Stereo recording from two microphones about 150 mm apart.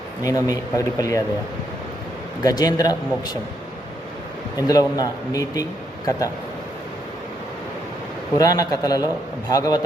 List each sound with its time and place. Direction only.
0.2 s a man's voice: 25° left (ahead or behind)
2.4 s a man's voice: 25° left (ahead or behind)
4.5 s a man's voice: 25° left (ahead or behind)
8.4 s a man's voice: 25° left (ahead or behind)